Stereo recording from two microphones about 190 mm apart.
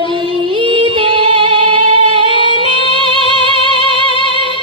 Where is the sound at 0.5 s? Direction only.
25° right (ahead or behind).